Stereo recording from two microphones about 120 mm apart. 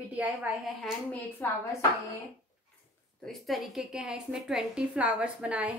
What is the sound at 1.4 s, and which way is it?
Speech, 15° left (ahead or behind).